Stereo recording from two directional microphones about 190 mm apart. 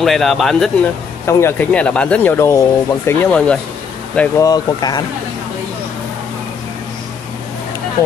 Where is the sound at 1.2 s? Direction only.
10° left (ahead or behind).